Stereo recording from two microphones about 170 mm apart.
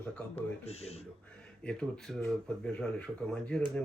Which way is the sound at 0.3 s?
35° left (ahead or behind).